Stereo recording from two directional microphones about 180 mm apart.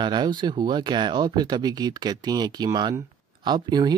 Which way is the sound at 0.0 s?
25° right (ahead or behind).